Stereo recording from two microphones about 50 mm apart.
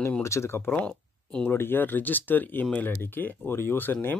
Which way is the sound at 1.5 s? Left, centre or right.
Left.